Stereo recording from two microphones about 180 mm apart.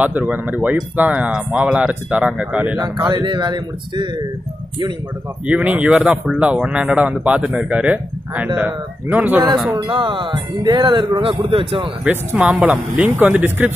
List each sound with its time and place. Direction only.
0.0 s speech: 10° right (ahead or behind)
3.1 s speech: 25° right (ahead or behind)
5.5 s speech: 10° right (ahead or behind)
9.8 s speech: 25° right (ahead or behind)
12.0 s speech: 10° right (ahead or behind)